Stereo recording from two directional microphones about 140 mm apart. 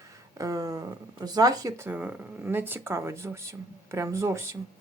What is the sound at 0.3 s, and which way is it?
Speech, 25° right (ahead or behind).